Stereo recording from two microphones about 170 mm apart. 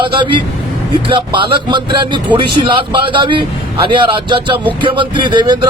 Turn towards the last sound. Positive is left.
turn(degrees=-25)  # may be behind; listen again after turning